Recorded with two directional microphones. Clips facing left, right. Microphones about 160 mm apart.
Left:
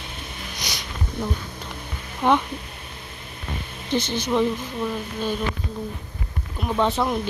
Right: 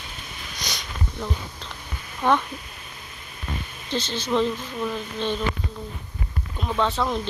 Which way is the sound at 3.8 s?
15° left (ahead or behind).